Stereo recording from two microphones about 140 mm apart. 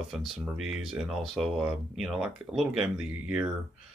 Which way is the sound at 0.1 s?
Centre (ahead or behind).